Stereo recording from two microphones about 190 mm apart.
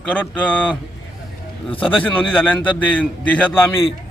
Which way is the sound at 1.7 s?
30° left (ahead or behind).